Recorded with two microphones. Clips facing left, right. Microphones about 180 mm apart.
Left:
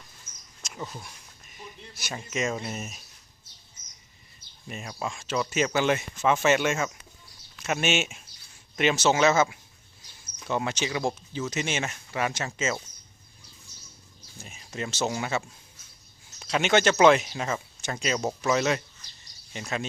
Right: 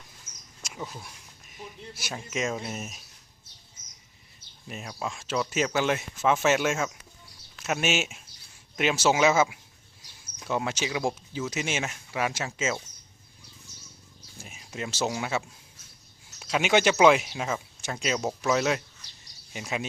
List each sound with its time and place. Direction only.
0.6 s speech: 5° right (ahead or behind)
4.7 s speech: centre (ahead or behind)
14.4 s speech: 5° right (ahead or behind)